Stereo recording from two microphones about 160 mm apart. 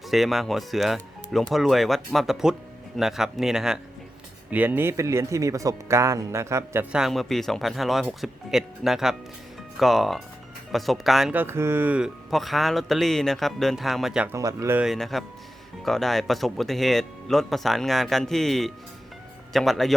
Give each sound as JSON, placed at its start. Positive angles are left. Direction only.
{"t": 0.1, "sound": "speech", "side_deg": 0}
{"t": 6.9, "sound": "speech", "side_deg": 0}
{"t": 11.3, "sound": "speech", "side_deg": -15}
{"t": 14.3, "sound": "speech", "side_deg": -20}
{"t": 14.8, "sound": "speech", "side_deg": 0}